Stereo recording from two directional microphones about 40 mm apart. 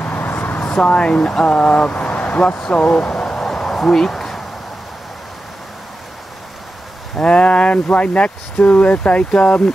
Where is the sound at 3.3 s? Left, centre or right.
Centre.